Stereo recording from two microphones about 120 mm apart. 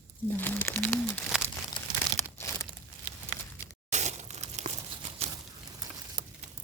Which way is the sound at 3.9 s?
75° right (ahead or behind).